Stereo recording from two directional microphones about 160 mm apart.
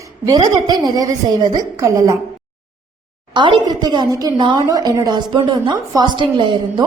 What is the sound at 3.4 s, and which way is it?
A woman's voice, 30° right (ahead or behind).